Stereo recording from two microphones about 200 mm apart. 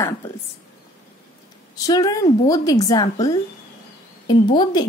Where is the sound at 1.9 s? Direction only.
20° left (ahead or behind).